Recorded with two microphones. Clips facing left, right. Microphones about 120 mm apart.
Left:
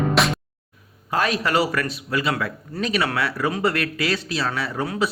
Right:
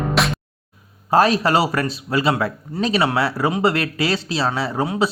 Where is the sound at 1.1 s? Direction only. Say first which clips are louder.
Right 6 dB; 30° right (ahead or behind).